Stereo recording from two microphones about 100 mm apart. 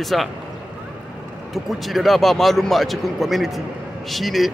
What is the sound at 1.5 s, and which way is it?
Speech, centre (ahead or behind).